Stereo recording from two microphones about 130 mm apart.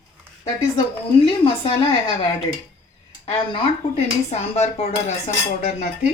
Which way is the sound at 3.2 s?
50° left (ahead or behind).